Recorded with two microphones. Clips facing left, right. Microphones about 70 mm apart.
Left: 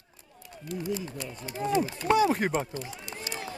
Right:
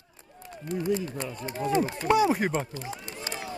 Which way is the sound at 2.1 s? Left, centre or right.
Centre.